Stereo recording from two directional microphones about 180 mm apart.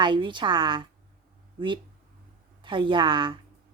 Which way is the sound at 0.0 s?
25° right (ahead or behind).